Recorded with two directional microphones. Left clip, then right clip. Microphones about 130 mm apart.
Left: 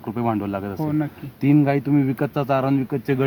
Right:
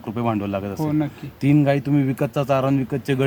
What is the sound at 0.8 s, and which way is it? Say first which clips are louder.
Speech: right 1 dB; 5° left (ahead or behind).